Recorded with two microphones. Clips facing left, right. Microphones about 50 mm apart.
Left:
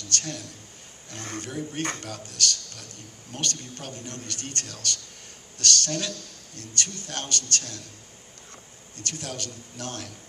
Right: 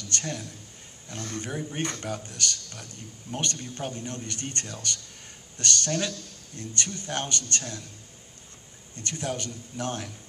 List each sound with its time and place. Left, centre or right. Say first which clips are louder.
0.1 s a man's voice: even; right
1.1 s speech: right 1 dB; left
1.4 s a man's voice: left 1 dB; centre
8.9 s a man's voice: right 3 dB; right